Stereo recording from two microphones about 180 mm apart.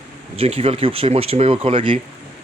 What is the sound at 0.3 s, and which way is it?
Speech, 35° right (ahead or behind).